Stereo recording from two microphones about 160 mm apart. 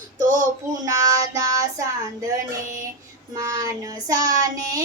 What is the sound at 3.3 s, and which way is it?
Child singing, 20° right (ahead or behind).